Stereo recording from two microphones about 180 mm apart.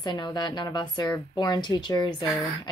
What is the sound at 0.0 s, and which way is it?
Speech, 25° left (ahead or behind).